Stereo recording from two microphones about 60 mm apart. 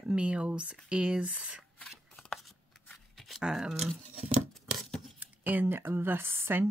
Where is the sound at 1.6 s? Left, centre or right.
Centre.